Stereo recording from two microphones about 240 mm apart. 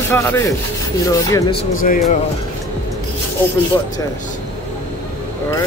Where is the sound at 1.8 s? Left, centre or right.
Left.